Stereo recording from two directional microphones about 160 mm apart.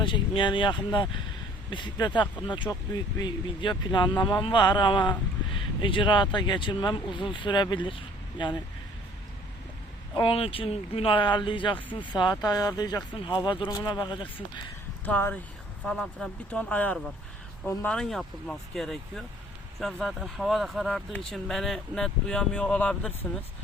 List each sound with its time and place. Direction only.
0.0 s speech: 30° left (ahead or behind)
10.2 s speech: 35° left (ahead or behind)
15.0 s speech: 10° left (ahead or behind)